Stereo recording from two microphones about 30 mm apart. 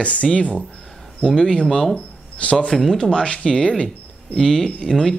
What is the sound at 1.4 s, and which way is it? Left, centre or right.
Speech, left.